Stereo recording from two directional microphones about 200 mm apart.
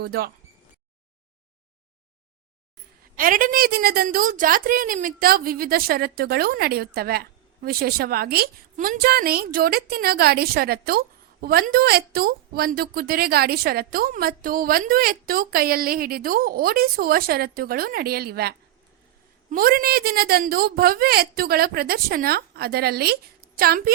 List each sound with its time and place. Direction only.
0.0 s a woman's voice: 50° right (ahead or behind)
3.2 s a woman's voice: 45° right (ahead or behind)